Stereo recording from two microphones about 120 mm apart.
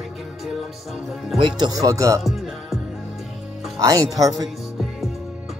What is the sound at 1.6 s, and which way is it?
Speech, 30° right (ahead or behind).